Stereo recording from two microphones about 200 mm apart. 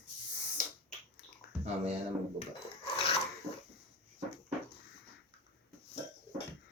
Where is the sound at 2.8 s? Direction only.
30° left (ahead or behind).